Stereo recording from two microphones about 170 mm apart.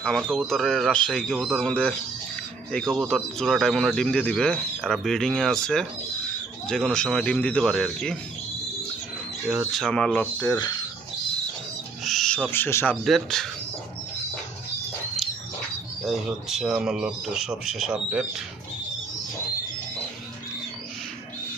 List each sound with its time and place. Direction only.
0.0 s speech: 5° left (ahead or behind)
9.5 s speech: centre (ahead or behind)
12.0 s owl: centre (ahead or behind)
13.1 s speech: centre (ahead or behind)
16.0 s speech: centre (ahead or behind)